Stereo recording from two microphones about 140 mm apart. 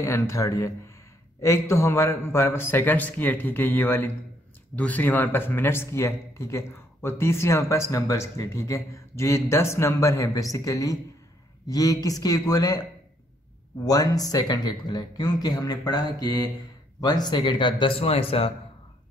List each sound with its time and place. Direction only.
0.0 s speech: 20° left (ahead or behind)
13.8 s speech: 25° left (ahead or behind); by 18.5 s 45° left (ahead or behind)